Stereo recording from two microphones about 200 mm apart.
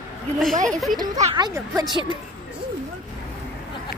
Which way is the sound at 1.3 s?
20° right (ahead or behind).